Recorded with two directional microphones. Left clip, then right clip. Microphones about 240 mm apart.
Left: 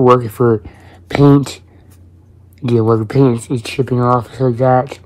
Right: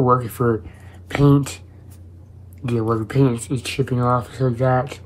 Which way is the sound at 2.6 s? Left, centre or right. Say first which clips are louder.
Left 8 dB; left.